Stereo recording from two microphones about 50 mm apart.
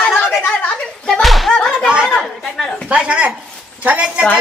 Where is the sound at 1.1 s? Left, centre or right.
Centre.